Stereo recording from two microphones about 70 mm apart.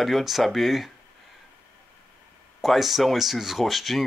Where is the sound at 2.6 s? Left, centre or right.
Centre.